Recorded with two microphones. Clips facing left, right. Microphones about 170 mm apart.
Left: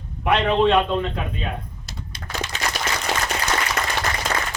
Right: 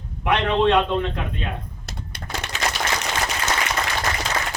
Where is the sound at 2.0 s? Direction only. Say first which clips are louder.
Left 2 dB; 60° right (ahead or behind).